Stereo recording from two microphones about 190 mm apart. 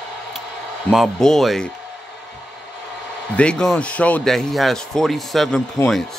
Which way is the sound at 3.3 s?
5° left (ahead or behind).